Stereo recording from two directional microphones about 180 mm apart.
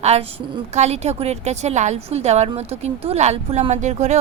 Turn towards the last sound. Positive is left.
turn(degrees=-40)  # may be behind; listen again after turning